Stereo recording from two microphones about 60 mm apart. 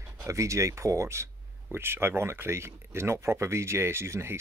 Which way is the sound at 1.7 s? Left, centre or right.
Right.